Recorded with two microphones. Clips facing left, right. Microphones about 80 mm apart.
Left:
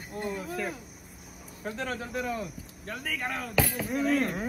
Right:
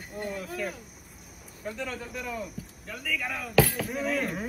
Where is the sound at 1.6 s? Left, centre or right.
Left.